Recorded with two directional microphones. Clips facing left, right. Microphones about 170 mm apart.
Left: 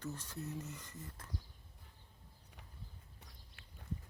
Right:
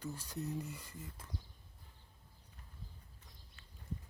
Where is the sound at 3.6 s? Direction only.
60° left (ahead or behind).